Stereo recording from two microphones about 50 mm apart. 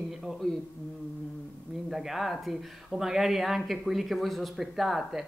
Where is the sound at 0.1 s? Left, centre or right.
Centre.